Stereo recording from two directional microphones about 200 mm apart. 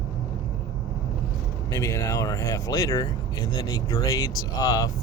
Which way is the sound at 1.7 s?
15° left (ahead or behind).